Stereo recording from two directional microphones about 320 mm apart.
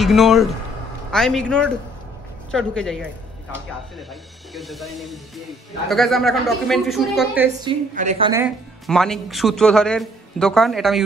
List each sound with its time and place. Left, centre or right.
0.0 s speech: centre
4.1 s speech: centre
7.6 s a woman's voice: right
8.3 s speech: centre